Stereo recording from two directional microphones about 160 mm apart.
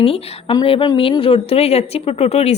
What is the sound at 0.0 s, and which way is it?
A woman's voice, 35° left (ahead or behind).